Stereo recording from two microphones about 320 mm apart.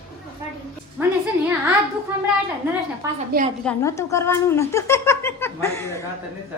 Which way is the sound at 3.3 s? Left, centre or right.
Right.